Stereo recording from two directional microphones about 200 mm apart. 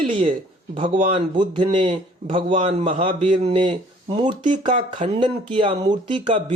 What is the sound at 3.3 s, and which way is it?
Speech, 25° right (ahead or behind).